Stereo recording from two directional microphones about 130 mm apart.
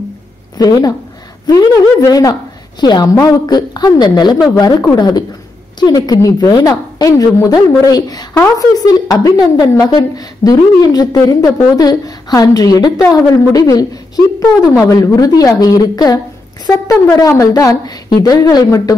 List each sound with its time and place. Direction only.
0.6 s a woman's voice: 30° left (ahead or behind)